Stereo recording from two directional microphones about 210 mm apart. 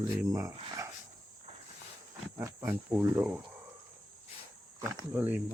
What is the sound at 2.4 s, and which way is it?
Speech, 10° right (ahead or behind).